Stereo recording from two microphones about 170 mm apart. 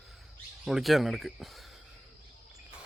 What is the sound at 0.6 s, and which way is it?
Speech, centre (ahead or behind).